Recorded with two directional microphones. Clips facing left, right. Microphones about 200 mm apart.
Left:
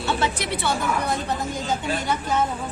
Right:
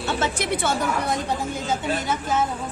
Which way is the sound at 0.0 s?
50° right (ahead or behind).